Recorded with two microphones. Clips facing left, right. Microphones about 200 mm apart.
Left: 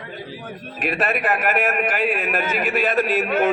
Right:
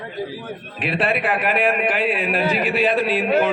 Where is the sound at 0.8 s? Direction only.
45° left (ahead or behind).